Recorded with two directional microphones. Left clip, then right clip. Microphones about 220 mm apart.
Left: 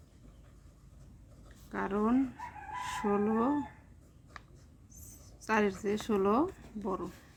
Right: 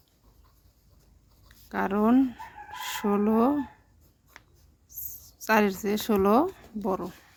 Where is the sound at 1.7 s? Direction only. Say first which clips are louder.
Right 7 dB; 50° right (ahead or behind).